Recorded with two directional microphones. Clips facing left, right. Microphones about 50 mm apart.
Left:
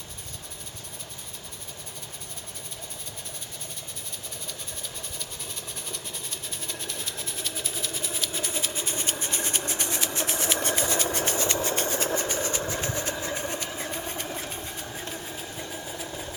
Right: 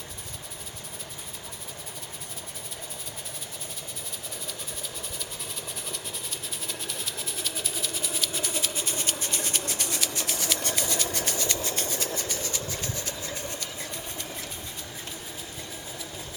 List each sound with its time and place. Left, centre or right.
5.9 s engine: centre; by 14.3 s left
14.3 s train: left